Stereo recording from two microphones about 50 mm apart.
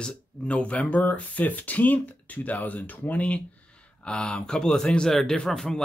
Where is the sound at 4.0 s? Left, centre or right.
Centre.